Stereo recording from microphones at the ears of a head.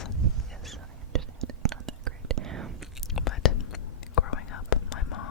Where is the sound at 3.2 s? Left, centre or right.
Left.